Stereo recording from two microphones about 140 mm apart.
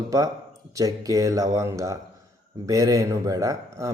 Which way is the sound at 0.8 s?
25° right (ahead or behind).